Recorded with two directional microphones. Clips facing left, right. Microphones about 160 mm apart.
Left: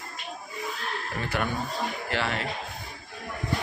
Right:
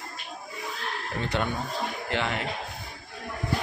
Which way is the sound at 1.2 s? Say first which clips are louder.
Right 1 dB; 25° right (ahead or behind).